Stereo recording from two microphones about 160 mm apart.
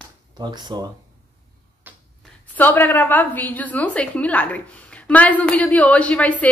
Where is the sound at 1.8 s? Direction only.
10° right (ahead or behind).